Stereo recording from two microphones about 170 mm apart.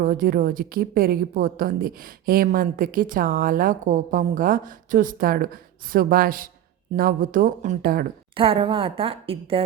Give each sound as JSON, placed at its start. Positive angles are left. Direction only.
{"t": 0.0, "sound": "a woman's voice", "side_deg": -55}
{"t": 8.4, "sound": "a woman's voice", "side_deg": -30}